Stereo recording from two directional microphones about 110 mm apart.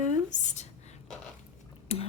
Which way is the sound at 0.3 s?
90° left.